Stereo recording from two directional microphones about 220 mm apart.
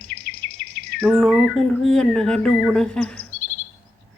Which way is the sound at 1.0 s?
Centre (ahead or behind).